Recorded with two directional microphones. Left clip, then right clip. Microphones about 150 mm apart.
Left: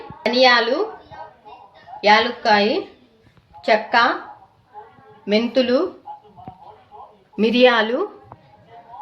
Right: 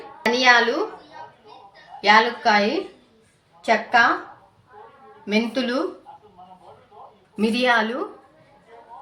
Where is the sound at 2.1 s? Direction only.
55° left (ahead or behind).